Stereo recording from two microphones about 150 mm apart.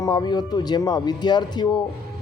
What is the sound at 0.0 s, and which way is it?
Speech, 30° left (ahead or behind).